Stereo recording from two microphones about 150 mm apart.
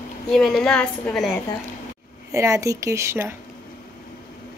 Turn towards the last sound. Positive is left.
turn(degrees=-20)  # may be behind; listen again after turning